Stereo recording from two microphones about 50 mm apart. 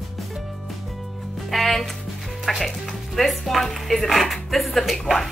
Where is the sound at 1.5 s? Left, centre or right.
Centre.